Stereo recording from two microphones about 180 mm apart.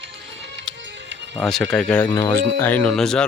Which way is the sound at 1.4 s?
Centre (ahead or behind).